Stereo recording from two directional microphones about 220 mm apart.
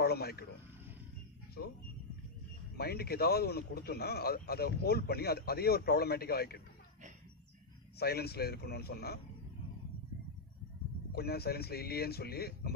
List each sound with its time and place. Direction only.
0.0 s a man's voice: 45° left (ahead or behind)
2.8 s a man's voice: 45° left (ahead or behind)
8.0 s a man's voice: 45° left (ahead or behind)
11.1 s a man's voice: 45° left (ahead or behind)